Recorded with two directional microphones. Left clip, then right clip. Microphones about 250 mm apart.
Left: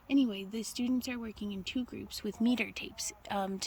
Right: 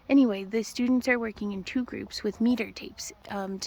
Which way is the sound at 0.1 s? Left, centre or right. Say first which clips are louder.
Right 8 dB; centre.